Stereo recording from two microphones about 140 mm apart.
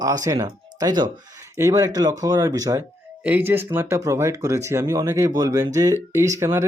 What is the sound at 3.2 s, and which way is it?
Speech, 10° right (ahead or behind).